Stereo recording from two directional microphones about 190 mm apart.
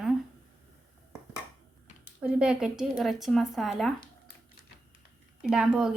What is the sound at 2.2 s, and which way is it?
Speech, 5° right (ahead or behind).